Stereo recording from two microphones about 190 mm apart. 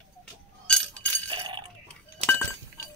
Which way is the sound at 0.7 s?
5° left (ahead or behind).